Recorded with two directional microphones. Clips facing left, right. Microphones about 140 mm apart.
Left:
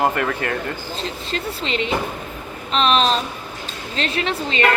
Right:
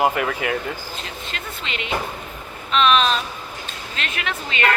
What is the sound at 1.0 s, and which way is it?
A man's voice, 35° left (ahead or behind).